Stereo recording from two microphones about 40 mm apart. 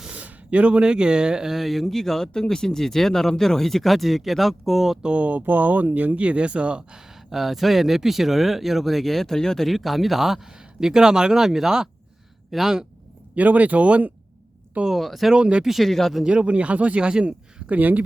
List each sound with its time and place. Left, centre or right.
0.1 s speech: right
1.5 s speech: centre
5.0 s speech: right
5.5 s speech: right
7.3 s speech: centre
9.6 s speech: centre
12.5 s speech: centre
13.3 s speech: right
14.8 s speech: centre
15.4 s speech: right
15.6 s speech: centre
15.9 s speech: centre
16.2 s speech: right
17.7 s speech: right